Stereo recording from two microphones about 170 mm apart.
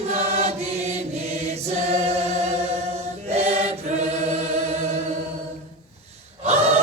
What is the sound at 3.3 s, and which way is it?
Chant, 40° right (ahead or behind).